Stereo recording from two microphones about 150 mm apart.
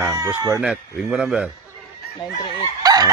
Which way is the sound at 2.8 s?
25° right (ahead or behind).